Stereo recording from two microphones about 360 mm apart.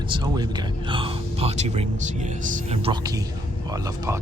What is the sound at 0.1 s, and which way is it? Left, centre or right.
Speech, centre.